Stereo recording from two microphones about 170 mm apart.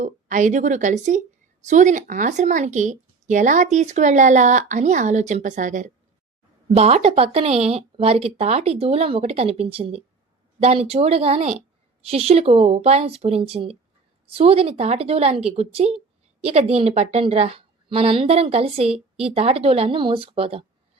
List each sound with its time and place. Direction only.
0.0 s a woman's voice: 50° right (ahead or behind)